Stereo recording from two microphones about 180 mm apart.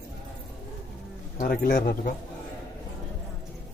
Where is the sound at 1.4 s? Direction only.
55° left (ahead or behind).